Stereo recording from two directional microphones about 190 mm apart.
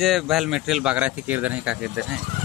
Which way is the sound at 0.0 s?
Centre (ahead or behind).